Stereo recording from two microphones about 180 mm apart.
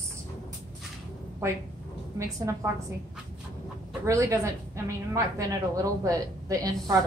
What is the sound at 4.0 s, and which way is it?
A woman's voice, 15° right (ahead or behind).